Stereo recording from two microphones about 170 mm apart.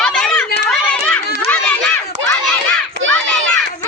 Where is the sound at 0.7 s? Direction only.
10° left (ahead or behind).